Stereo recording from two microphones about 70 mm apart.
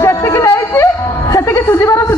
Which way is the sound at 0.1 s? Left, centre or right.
Left.